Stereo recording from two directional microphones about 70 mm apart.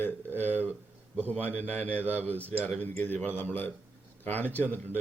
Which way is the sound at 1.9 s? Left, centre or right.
Right.